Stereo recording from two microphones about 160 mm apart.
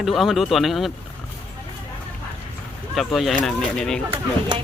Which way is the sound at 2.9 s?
Centre (ahead or behind).